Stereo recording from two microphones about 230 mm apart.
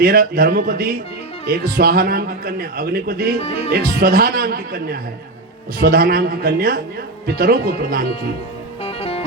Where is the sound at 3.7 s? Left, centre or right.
Right.